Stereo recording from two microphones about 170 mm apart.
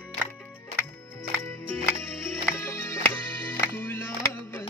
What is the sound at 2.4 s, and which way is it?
Music, 15° left (ahead or behind).